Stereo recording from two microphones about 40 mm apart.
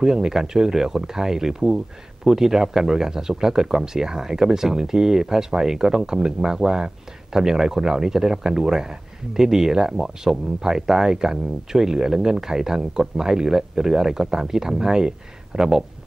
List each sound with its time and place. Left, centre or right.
0.0 s speech: centre